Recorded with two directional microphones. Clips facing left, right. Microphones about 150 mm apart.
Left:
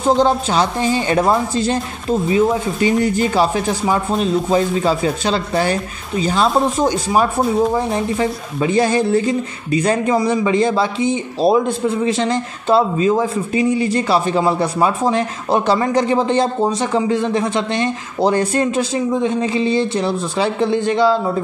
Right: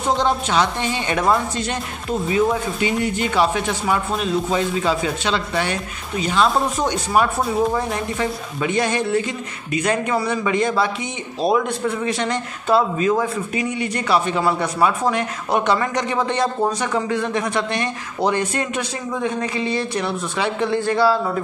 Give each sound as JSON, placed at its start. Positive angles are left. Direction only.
{"t": 0.1, "sound": "a woman's voice", "side_deg": 35}